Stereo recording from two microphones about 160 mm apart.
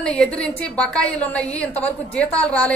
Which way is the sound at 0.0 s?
5° left (ahead or behind).